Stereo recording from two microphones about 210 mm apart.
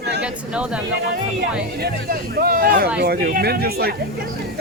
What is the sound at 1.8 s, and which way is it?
Speech, 45° right (ahead or behind).